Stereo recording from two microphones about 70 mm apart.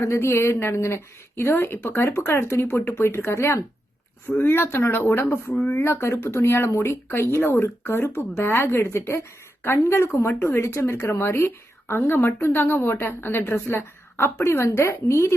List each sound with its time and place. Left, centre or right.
0.0 s speech: left